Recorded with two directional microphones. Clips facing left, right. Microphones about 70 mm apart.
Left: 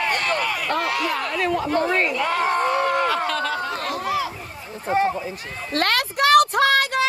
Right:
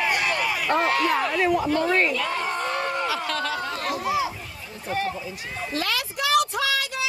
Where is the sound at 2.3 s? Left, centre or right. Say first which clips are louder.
Left 6 dB; left.